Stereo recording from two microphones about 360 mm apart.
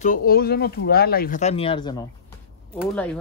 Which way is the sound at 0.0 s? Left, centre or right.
Left.